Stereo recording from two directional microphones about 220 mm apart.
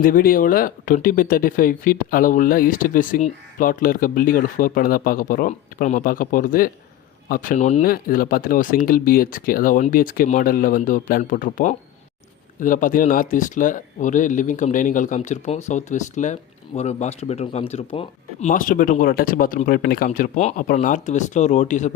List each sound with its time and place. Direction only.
0.0 s speech: 40° left (ahead or behind)